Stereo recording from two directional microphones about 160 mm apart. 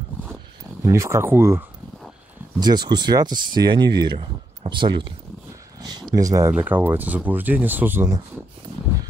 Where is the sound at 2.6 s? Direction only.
25° right (ahead or behind).